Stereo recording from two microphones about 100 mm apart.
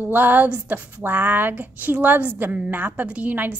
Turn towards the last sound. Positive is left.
turn(degrees=-15)  # may be behind; listen again after turning